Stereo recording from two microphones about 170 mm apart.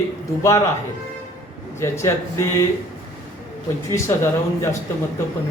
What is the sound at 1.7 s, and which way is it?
Speech, 15° left (ahead or behind).